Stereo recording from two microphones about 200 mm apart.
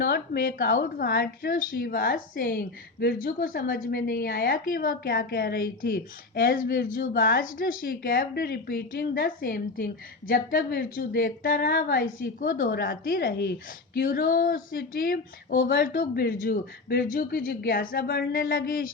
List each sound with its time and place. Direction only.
0.0 s a woman's voice: 50° left (ahead or behind)